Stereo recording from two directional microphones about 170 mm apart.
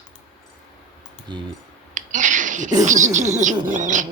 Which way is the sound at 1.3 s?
25° right (ahead or behind).